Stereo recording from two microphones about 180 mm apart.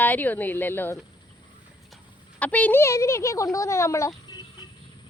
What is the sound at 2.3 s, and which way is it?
A woman's voice, 10° left (ahead or behind).